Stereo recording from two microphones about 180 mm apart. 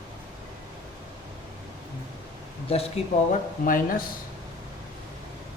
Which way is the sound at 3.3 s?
50° left (ahead or behind).